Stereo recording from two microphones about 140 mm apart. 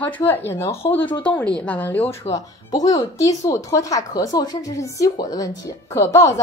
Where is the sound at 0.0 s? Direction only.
10° left (ahead or behind).